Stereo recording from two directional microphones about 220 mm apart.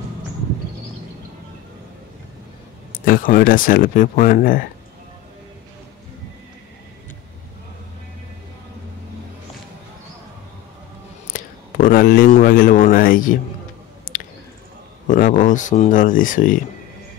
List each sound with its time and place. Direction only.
2.9 s speech: 40° left (ahead or behind)
11.3 s a sound: 40° left (ahead or behind)
15.0 s speech: 35° left (ahead or behind)